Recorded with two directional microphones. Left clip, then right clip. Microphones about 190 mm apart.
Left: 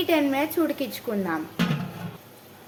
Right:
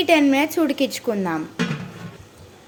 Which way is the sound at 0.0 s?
40° right (ahead or behind).